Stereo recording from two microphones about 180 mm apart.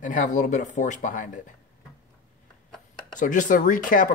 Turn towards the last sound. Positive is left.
turn(degrees=45)  # may be behind; listen again after turning